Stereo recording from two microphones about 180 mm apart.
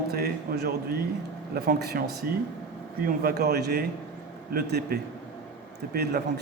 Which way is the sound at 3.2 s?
60° right (ahead or behind).